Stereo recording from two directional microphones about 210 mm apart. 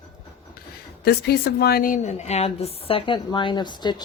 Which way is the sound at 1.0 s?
50° left (ahead or behind).